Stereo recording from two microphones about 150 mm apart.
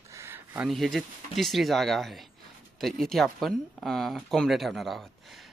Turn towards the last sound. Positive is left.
turn(degrees=0)  # may be behind; listen again after turning